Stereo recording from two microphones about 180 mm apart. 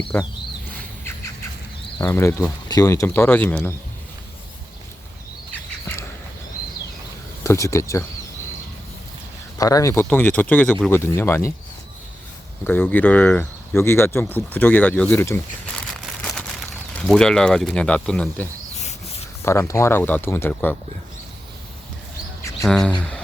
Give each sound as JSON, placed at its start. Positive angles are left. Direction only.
{"t": 0.1, "sound": "speech", "side_deg": 10}
{"t": 2.0, "sound": "speech", "side_deg": 15}
{"t": 7.4, "sound": "speech", "side_deg": 15}
{"t": 9.6, "sound": "speech", "side_deg": 20}
{"t": 12.6, "sound": "speech", "side_deg": 10}
{"t": 16.2, "sound": "a sound", "side_deg": 5}
{"t": 16.9, "sound": "speech", "side_deg": 5}
{"t": 19.5, "sound": "speech", "side_deg": 15}
{"t": 22.6, "sound": "speech", "side_deg": 5}